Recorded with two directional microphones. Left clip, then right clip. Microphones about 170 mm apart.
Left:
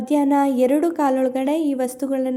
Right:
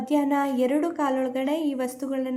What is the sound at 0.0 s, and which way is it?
A woman's voice, 30° left (ahead or behind).